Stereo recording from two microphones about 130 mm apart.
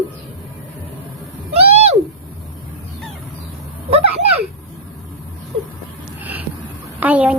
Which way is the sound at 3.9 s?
50° right (ahead or behind).